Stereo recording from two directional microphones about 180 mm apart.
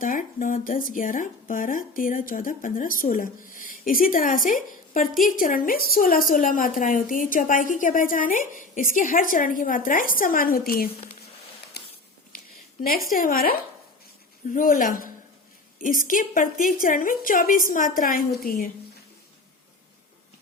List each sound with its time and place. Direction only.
0.0 s a woman's voice: 50° left (ahead or behind)
11.8 s a sound: 65° left (ahead or behind)
12.8 s a woman's voice: 55° left (ahead or behind)